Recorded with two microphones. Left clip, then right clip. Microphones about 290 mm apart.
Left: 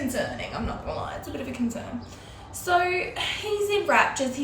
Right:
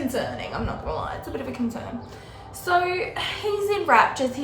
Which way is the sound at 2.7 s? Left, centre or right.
Centre.